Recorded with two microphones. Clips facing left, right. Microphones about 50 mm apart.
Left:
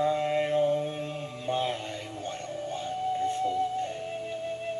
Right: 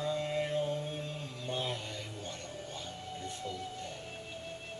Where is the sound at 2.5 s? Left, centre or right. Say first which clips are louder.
Left 10 dB; left.